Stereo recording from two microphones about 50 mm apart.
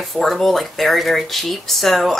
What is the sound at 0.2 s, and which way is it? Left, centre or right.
Speech, centre.